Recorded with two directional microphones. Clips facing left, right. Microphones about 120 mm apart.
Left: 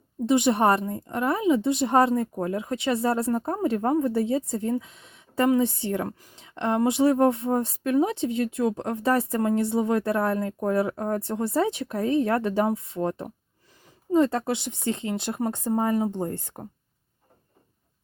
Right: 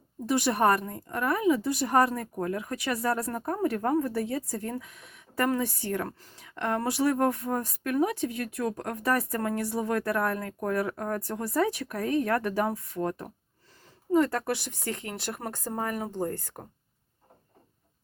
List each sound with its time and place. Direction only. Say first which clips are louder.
0.3 s speech: left 4 dB; 20° left (ahead or behind)
4.8 s a sound: left 2 dB; 25° left (ahead or behind)
5.5 s speech: left 6 dB; 25° left (ahead or behind)
6.3 s speech: left 4 dB; 25° left (ahead or behind)